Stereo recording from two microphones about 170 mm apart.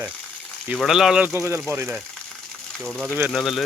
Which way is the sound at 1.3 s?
15° right (ahead or behind).